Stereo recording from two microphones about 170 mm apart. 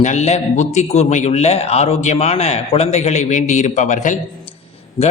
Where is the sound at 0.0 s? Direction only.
45° left (ahead or behind).